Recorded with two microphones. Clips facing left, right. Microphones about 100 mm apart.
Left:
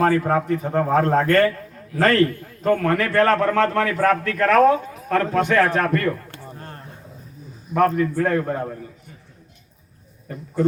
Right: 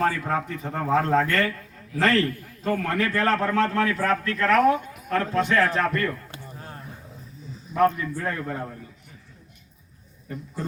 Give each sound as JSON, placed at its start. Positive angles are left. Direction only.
{"t": 0.0, "sound": "a man's voice", "side_deg": 45}
{"t": 4.5, "sound": "speech", "side_deg": 30}
{"t": 5.1, "sound": "a man's voice", "side_deg": 60}
{"t": 6.3, "sound": "a sound", "side_deg": -5}
{"t": 7.7, "sound": "a man's voice", "side_deg": 50}
{"t": 8.1, "sound": "a man's voice", "side_deg": 60}
{"t": 8.4, "sound": "a man's voice", "side_deg": 45}